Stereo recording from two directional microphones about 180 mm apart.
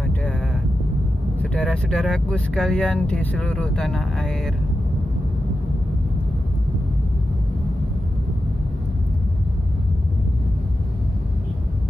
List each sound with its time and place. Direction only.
1.4 s speech: 5° left (ahead or behind)